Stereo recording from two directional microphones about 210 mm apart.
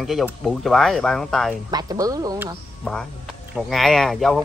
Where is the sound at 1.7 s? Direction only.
15° right (ahead or behind).